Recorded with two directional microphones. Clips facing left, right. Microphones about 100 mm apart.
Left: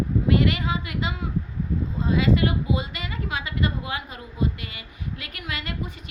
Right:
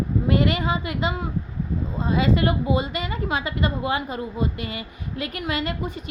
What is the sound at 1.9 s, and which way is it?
A woman's voice, 35° right (ahead or behind).